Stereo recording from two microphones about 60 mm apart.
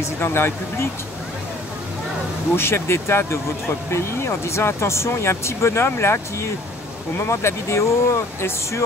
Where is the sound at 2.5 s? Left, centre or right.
Left.